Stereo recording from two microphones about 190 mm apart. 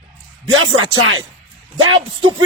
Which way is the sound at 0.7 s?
90° right.